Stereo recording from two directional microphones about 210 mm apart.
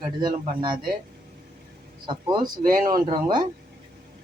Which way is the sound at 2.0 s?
20° right (ahead or behind).